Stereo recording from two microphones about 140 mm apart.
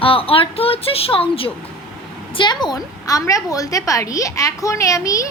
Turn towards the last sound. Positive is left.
turn(degrees=25)  # may be behind; listen again after turning